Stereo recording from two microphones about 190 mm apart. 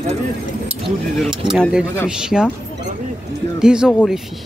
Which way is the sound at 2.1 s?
5° right (ahead or behind).